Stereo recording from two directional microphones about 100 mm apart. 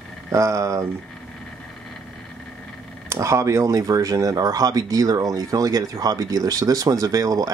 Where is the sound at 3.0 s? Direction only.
30° right (ahead or behind).